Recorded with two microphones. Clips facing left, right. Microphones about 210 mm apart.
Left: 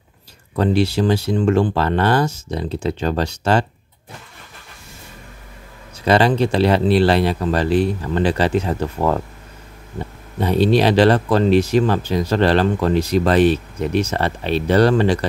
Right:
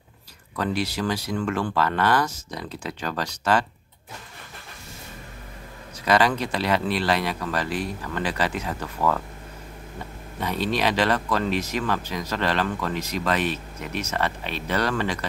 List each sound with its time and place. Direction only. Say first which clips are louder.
0.6 s speech: left 9 dB; 30° left (ahead or behind)
6.0 s speech: left 6 dB; 30° left (ahead or behind)
10.4 s speech: left 9 dB; 30° left (ahead or behind)